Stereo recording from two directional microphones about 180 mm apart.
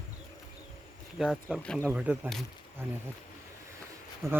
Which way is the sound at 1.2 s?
5° right (ahead or behind).